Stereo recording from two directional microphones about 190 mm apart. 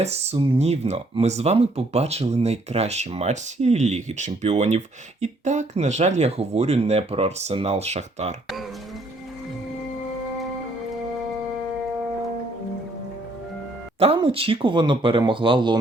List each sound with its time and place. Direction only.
0.0 s speech: 35° right (ahead or behind)
14.0 s speech: 30° right (ahead or behind)